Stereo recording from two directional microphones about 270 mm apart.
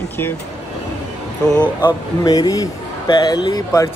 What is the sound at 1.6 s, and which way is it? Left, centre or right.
A man's voice, centre.